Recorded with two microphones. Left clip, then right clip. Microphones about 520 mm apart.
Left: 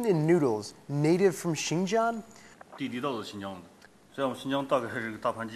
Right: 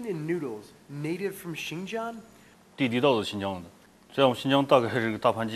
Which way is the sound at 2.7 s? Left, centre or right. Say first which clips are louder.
Right 9 dB; right.